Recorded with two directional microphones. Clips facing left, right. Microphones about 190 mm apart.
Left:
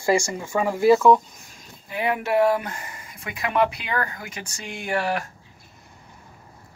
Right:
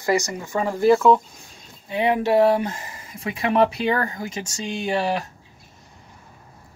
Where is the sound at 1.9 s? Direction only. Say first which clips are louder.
Right 4 dB; 25° right (ahead or behind).